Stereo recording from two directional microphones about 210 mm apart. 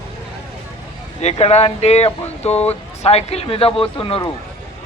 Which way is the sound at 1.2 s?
30° left (ahead or behind).